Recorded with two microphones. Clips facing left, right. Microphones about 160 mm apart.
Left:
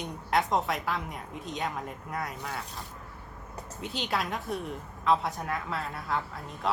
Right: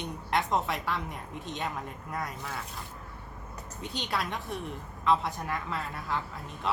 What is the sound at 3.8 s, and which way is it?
A woman's voice, centre (ahead or behind).